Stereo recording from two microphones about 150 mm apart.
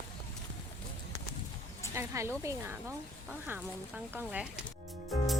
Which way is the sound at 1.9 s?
20° right (ahead or behind).